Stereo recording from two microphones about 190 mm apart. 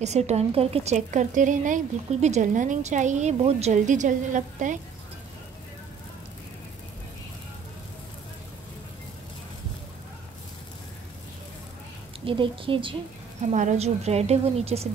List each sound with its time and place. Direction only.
0.0 s a woman's voice: 35° right (ahead or behind)
12.3 s a woman's voice: 25° right (ahead or behind)
13.5 s a woman's voice: 40° right (ahead or behind)